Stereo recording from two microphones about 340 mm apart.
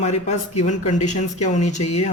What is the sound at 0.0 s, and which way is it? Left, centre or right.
Speech, centre.